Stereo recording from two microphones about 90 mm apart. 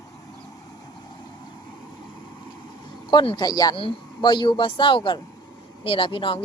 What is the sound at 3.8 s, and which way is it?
Speech, 70° left (ahead or behind).